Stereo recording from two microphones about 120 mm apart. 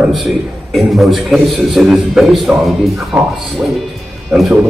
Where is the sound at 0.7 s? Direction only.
Centre (ahead or behind).